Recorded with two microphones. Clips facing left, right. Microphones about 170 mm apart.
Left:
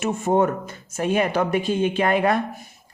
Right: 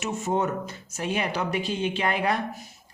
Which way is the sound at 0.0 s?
55° left (ahead or behind).